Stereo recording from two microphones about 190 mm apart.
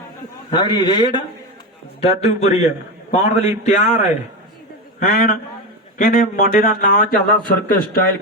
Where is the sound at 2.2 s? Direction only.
35° left (ahead or behind).